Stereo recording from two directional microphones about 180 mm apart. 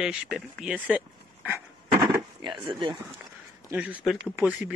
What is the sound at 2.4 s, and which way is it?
Speech, 25° right (ahead or behind).